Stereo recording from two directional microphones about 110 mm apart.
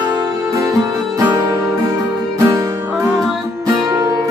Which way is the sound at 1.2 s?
30° right (ahead or behind).